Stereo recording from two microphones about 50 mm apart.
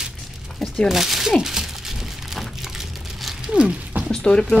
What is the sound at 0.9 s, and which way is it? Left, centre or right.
Crumpling, centre.